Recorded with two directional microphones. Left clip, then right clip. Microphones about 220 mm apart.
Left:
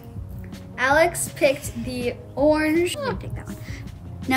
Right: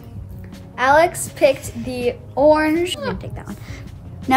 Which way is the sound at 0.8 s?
15° right (ahead or behind).